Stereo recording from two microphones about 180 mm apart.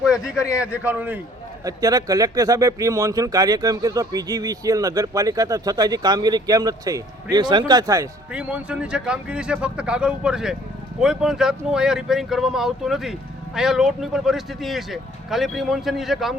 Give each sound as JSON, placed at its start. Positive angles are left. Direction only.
{"t": 0.0, "sound": "a man's voice", "side_deg": -5}
{"t": 1.6, "sound": "speech", "side_deg": -20}
{"t": 8.3, "sound": "speech", "side_deg": -5}